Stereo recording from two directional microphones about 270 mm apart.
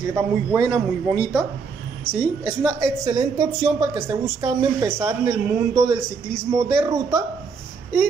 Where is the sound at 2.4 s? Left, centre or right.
Centre.